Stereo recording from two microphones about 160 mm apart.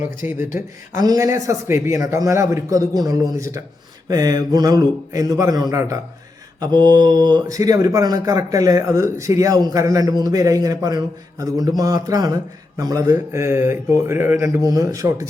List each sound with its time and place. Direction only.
0.2 s a man's voice: 10° right (ahead or behind)